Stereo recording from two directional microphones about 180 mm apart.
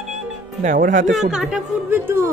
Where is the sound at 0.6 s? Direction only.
45° right (ahead or behind).